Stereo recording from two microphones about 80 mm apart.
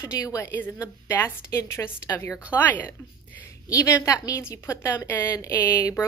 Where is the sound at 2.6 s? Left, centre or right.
Left.